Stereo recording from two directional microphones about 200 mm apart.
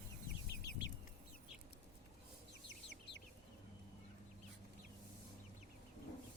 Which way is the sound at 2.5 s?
60° left (ahead or behind).